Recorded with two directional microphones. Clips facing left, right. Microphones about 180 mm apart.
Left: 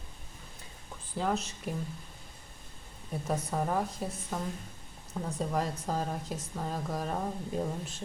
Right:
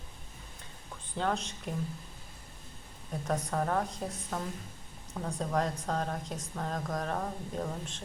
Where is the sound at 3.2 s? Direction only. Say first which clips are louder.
Even; 5° left (ahead or behind).